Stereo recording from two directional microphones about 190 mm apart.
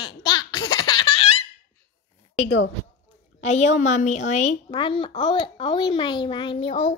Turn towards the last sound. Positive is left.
turn(degrees=30)  # may be behind; listen again after turning